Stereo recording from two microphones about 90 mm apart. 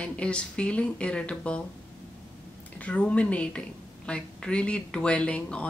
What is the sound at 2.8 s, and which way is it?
A woman's voice, 15° left (ahead or behind).